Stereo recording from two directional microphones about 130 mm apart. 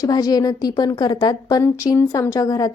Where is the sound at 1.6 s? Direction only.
20° left (ahead or behind).